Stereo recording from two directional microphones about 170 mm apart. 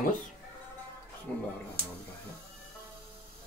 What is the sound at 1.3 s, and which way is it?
Speech, 5° left (ahead or behind).